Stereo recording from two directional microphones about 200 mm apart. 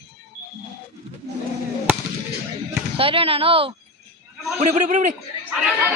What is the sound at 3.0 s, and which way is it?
A woman's voice, 30° right (ahead or behind).